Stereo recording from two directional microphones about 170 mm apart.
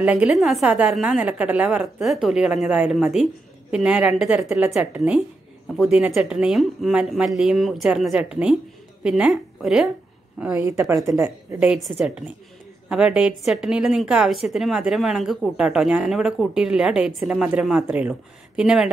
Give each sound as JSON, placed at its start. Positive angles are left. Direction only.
{"t": 0.0, "sound": "a woman's voice", "side_deg": -5}
{"t": 11.1, "sound": "a woman's voice", "side_deg": -20}
{"t": 11.6, "sound": "a woman's voice", "side_deg": -5}